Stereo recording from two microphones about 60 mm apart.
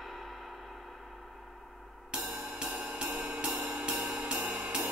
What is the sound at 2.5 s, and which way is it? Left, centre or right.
Music, right.